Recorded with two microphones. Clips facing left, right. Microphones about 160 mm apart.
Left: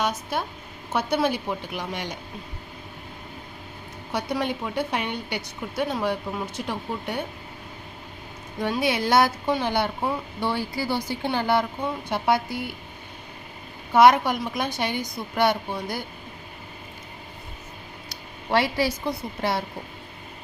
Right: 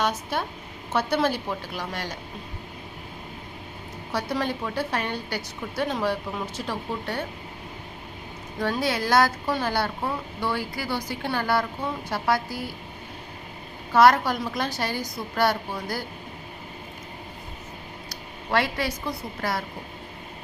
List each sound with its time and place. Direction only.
0.0 s a woman's voice: 10° left (ahead or behind)
4.1 s a woman's voice: 15° left (ahead or behind)
8.6 s a woman's voice: 20° left (ahead or behind)
13.9 s a woman's voice: 20° left (ahead or behind)
18.1 s a sound: 25° left (ahead or behind)
19.0 s a woman's voice: 25° left (ahead or behind)